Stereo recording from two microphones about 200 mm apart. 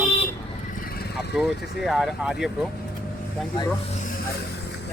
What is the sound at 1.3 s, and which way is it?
Speech, centre (ahead or behind).